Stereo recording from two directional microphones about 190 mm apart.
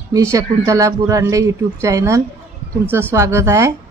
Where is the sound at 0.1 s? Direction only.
15° right (ahead or behind).